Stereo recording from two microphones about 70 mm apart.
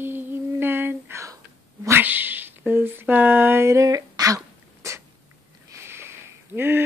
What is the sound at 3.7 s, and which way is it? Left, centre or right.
Speech, right.